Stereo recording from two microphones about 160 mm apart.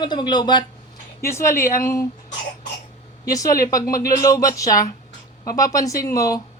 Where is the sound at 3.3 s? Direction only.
20° left (ahead or behind).